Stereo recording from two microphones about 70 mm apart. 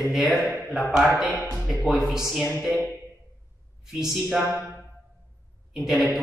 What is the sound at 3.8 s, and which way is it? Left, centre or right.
Speech, centre.